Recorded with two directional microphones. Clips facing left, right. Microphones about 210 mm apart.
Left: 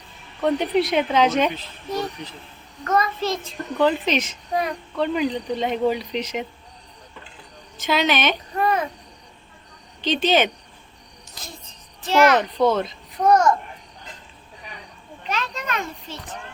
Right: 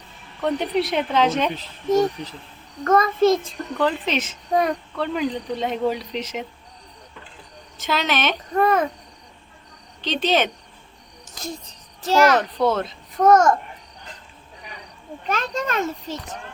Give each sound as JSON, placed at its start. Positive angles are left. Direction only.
{"t": 0.4, "sound": "speech", "side_deg": 0}
{"t": 1.5, "sound": "speech", "side_deg": -45}
{"t": 3.4, "sound": "speech", "side_deg": 0}
{"t": 7.8, "sound": "speech", "side_deg": 0}
{"t": 10.0, "sound": "speech", "side_deg": 0}
{"t": 11.3, "sound": "a child's voice", "side_deg": -40}
{"t": 12.4, "sound": "speech", "side_deg": 0}
{"t": 13.2, "sound": "speech", "side_deg": -45}
{"t": 15.3, "sound": "a child's voice", "side_deg": -45}